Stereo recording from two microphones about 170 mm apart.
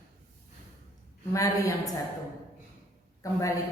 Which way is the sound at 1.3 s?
20° left (ahead or behind).